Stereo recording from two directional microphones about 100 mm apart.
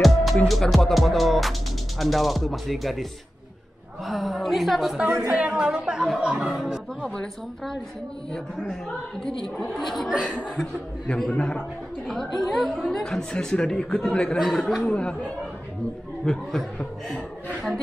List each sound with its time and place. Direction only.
0.0 s music: centre (ahead or behind)
0.5 s speech: centre (ahead or behind)
14.9 s speech: 10° left (ahead or behind)